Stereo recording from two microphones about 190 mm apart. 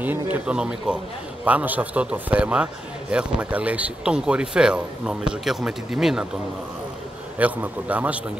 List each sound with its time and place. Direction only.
0.0 s a man's voice: 10° right (ahead or behind)
7.3 s a man's voice: 10° right (ahead or behind)